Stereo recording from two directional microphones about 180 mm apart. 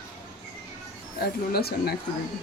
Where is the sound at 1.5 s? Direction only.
60° left (ahead or behind).